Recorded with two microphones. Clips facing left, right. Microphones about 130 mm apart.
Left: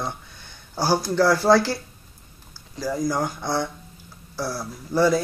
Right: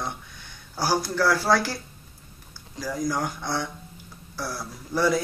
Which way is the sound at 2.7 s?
10° left (ahead or behind).